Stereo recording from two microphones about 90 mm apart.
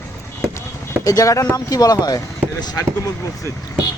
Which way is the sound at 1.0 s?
40° left (ahead or behind).